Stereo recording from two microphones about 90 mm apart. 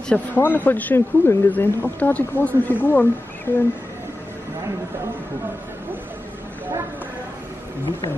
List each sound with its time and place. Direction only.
0.1 s speech: 20° left (ahead or behind)